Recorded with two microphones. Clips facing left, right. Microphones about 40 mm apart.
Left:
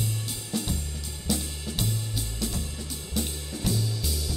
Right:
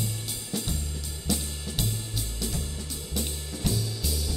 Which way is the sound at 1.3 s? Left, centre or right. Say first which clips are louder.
Left 1 dB; centre.